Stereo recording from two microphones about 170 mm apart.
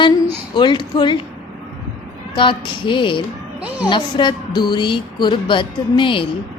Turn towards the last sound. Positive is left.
turn(degrees=30)  # may be behind; listen again after turning